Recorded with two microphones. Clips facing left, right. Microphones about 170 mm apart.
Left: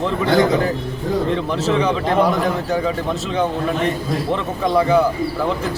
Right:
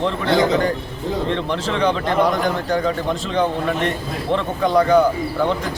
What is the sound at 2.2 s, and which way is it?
Speech, 30° left (ahead or behind).